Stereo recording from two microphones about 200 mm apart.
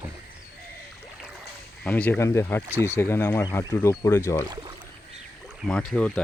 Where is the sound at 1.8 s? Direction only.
10° left (ahead or behind).